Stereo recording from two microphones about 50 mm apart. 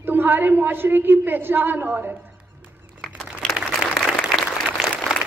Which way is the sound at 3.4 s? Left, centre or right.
Centre.